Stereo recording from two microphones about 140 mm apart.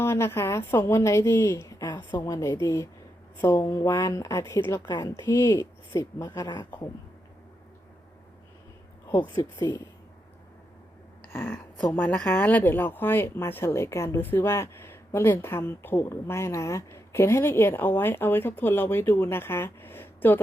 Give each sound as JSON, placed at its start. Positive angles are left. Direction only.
{"t": 0.0, "sound": "a woman's voice", "side_deg": 20}
{"t": 9.1, "sound": "a woman's voice", "side_deg": 30}
{"t": 11.2, "sound": "speech", "side_deg": 15}